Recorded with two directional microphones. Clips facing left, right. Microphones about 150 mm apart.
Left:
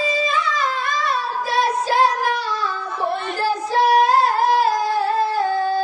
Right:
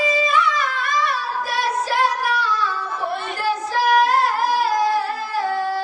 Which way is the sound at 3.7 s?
25° left (ahead or behind).